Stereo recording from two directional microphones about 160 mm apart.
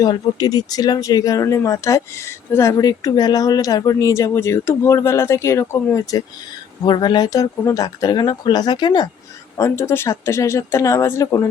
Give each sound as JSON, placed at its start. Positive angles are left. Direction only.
{"t": 0.0, "sound": "speech", "side_deg": 25}
{"t": 9.6, "sound": "speech", "side_deg": 15}